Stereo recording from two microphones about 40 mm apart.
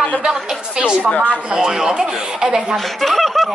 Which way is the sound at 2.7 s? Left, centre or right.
Centre.